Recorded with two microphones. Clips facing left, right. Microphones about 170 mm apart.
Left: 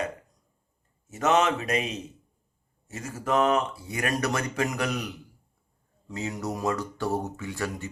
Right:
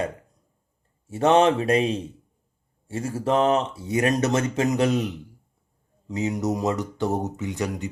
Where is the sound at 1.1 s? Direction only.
30° right (ahead or behind).